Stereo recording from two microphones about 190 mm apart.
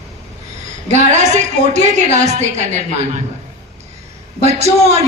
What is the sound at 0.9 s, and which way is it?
A woman's voice, 40° right (ahead or behind).